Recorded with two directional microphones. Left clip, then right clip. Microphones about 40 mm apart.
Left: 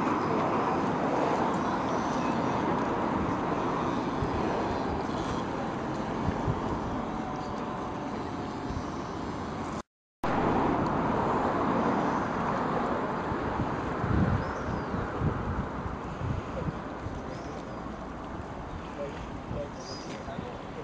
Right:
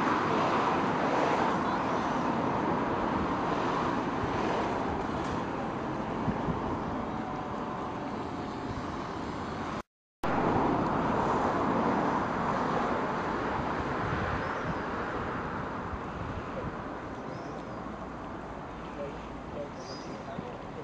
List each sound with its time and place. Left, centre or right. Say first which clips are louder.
0.0 s vehicle: right 1 dB; centre
1.6 s vehicle: even; centre
10.2 s vehicle: left 1 dB; centre